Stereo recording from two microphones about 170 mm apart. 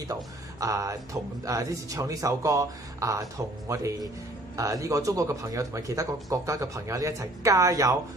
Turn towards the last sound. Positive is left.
turn(degrees=-20)  # may be behind; listen again after turning